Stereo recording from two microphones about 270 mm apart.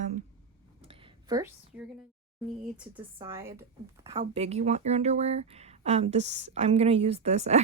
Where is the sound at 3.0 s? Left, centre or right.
Centre.